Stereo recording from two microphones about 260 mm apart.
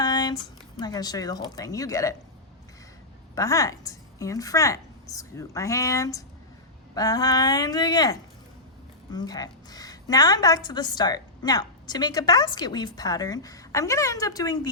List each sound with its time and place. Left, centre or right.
0.0 s a sound: centre
0.8 s a woman's voice: centre
3.3 s a woman's voice: centre
9.1 s a woman's voice: centre